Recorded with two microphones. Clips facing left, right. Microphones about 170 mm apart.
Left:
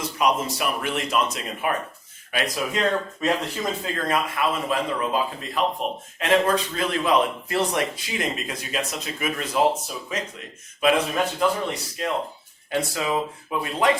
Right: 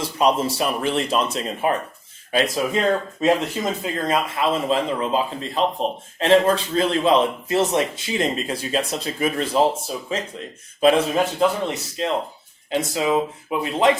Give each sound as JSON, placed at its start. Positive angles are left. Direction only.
{"t": 0.0, "sound": "a man's voice", "side_deg": -30}